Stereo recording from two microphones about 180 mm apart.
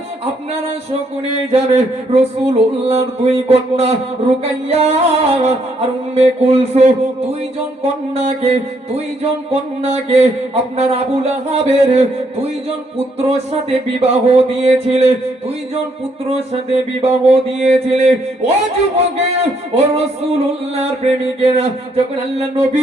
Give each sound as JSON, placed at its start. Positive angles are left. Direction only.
{"t": 1.5, "sound": "music", "side_deg": -35}
{"t": 8.1, "sound": "music", "side_deg": -35}
{"t": 14.0, "sound": "music", "side_deg": -35}
{"t": 17.0, "sound": "music", "side_deg": -35}